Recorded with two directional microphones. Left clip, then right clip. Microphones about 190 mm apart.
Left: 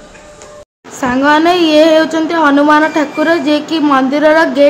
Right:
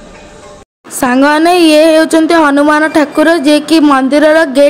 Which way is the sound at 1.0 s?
40° right (ahead or behind).